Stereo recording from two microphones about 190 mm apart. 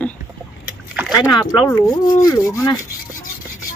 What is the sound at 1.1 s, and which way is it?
Rub, 20° left (ahead or behind).